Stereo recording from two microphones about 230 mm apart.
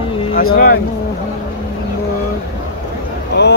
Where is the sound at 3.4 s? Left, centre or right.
Left.